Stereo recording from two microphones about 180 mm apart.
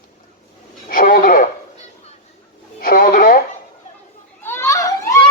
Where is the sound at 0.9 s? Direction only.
50° left (ahead or behind).